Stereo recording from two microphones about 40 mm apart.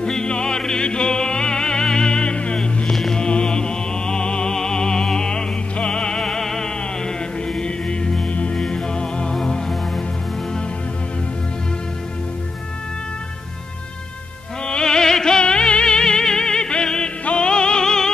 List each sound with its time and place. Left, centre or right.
0.0 s music: left
2.9 s music: centre
3.2 s music: left
8.3 s music: left
8.5 s music: centre
14.7 s music: centre